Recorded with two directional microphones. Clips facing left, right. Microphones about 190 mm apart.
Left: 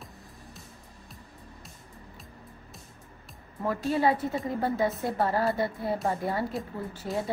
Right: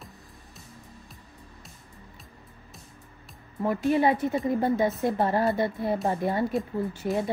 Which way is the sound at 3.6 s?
15° right (ahead or behind).